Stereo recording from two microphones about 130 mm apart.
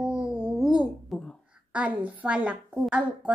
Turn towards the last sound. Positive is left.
turn(degrees=-10)  # may be behind; listen again after turning